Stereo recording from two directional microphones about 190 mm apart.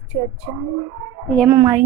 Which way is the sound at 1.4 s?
15° right (ahead or behind).